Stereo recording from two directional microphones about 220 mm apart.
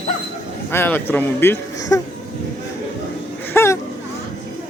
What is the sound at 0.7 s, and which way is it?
Speech, 10° left (ahead or behind).